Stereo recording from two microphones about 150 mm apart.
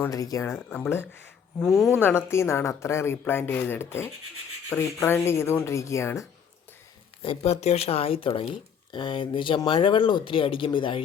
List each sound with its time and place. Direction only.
0.0 s a woman's voice: 25° left (ahead or behind)
1.5 s speech: centre (ahead or behind)
2.0 s a woman's voice: 15° left (ahead or behind)
7.2 s speech: 40° left (ahead or behind)